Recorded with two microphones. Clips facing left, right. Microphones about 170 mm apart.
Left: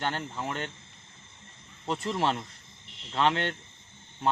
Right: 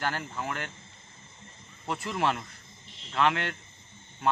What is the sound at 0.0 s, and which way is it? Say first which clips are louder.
Speech: even; 25° left (ahead or behind).